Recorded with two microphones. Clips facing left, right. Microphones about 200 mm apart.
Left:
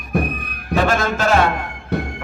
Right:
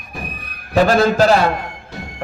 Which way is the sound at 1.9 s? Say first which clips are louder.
Left 12 dB; 60° left (ahead or behind).